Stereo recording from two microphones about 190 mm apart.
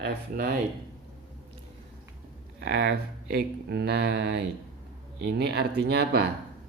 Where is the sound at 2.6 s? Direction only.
60° right (ahead or behind).